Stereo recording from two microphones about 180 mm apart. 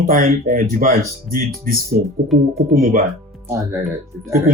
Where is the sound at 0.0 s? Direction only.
50° right (ahead or behind).